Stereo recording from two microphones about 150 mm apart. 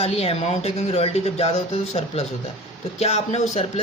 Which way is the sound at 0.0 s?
40° left (ahead or behind).